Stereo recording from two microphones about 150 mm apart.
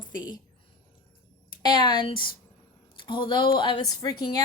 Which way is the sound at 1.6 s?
30° left (ahead or behind).